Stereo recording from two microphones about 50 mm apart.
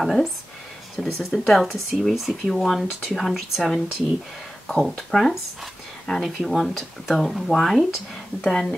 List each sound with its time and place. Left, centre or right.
0.0 s speech: centre
5.1 s speech: centre